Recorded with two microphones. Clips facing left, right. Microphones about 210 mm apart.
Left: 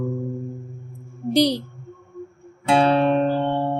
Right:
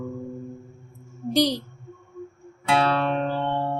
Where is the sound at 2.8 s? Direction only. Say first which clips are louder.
Left 8 dB; 20° left (ahead or behind).